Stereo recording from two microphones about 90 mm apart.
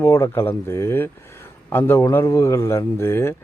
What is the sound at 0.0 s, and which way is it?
Speech, 30° left (ahead or behind).